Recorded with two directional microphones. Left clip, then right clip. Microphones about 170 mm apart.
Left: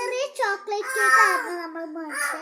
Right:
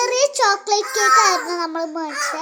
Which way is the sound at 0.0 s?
40° right (ahead or behind).